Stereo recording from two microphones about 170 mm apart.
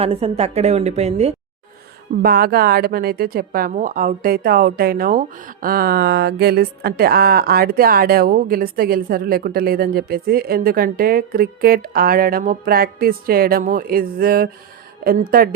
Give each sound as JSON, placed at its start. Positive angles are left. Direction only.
{"t": 0.0, "sound": "a woman's voice", "side_deg": -35}
{"t": 2.2, "sound": "speech", "side_deg": -60}